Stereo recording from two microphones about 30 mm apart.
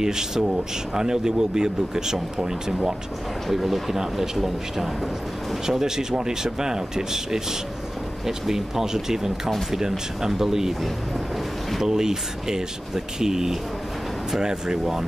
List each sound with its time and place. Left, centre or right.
0.0 s speech: centre
3.4 s speech: centre
5.7 s speech: centre
11.8 s speech: centre